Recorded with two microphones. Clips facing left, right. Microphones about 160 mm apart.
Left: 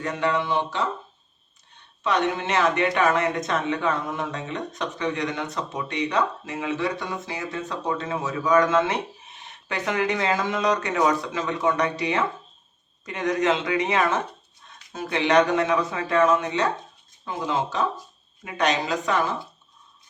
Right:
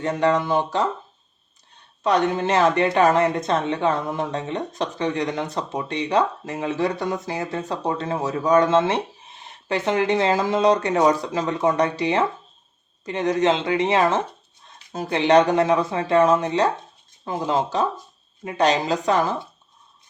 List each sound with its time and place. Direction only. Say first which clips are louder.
0.0 s speech: right 4 dB; 35° right (ahead or behind)
2.0 s speech: right 4 dB; 35° right (ahead or behind)